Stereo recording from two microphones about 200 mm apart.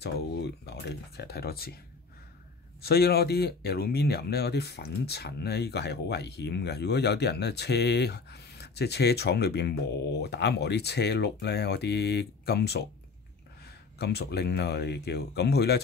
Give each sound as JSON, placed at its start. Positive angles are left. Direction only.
{"t": 0.0, "sound": "speech", "side_deg": 55}
{"t": 2.8, "sound": "speech", "side_deg": 50}
{"t": 13.9, "sound": "speech", "side_deg": 55}